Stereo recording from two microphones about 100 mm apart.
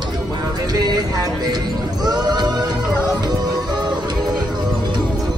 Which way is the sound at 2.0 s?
45° right (ahead or behind).